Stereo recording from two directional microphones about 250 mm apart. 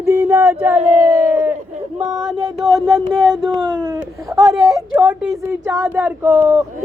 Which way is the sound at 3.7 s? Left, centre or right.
Centre.